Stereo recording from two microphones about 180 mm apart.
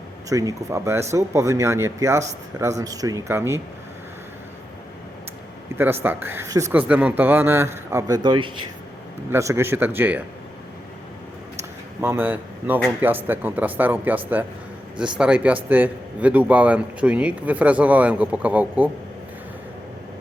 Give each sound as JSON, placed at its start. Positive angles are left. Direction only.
{"t": 0.3, "sound": "a man's voice", "side_deg": -20}
{"t": 5.7, "sound": "a man's voice", "side_deg": -10}
{"t": 12.0, "sound": "a man's voice", "side_deg": -10}